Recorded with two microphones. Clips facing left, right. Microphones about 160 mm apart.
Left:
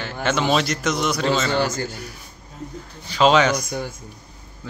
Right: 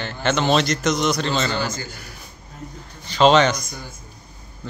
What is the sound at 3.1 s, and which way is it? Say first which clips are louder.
Speech: right 1 dB; 5° left (ahead or behind).